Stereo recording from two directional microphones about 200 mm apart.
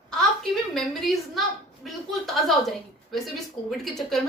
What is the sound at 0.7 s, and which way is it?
A woman's voice, centre (ahead or behind).